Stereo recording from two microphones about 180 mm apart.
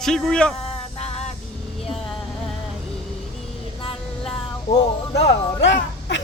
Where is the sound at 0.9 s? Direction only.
35° left (ahead or behind).